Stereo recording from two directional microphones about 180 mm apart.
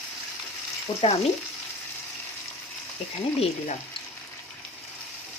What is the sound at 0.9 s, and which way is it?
Frying, 20° left (ahead or behind).